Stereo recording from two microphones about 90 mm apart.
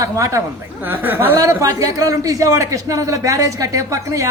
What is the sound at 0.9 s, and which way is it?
Speech, 20° right (ahead or behind).